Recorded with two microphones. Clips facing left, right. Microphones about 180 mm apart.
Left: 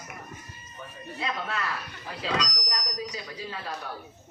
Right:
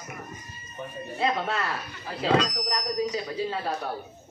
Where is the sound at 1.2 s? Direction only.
30° right (ahead or behind).